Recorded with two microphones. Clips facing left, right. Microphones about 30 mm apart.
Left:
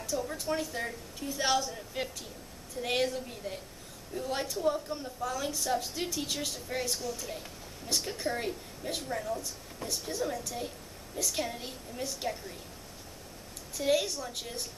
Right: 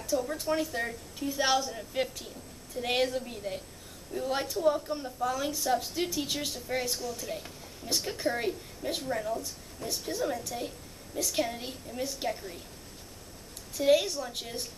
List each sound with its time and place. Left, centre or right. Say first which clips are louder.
0.0 s a woman's voice: right 3 dB; centre
13.7 s a woman's voice: right 4 dB; centre